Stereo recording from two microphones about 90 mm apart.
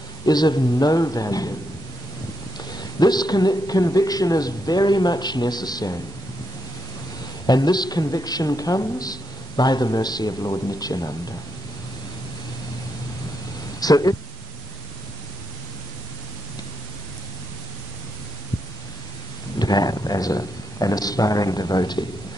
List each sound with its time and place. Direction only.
0.2 s a woman's voice: 50° left (ahead or behind)
2.7 s a woman's voice: 50° left (ahead or behind)
7.4 s a woman's voice: 50° left (ahead or behind)
13.7 s speech: 45° left (ahead or behind)
19.6 s a sound: 45° left (ahead or behind)